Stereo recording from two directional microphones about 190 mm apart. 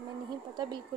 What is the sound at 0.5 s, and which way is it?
Speech, 25° right (ahead or behind).